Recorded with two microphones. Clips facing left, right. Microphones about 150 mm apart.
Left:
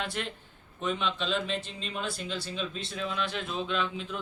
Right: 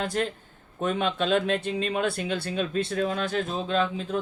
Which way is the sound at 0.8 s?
50° right (ahead or behind).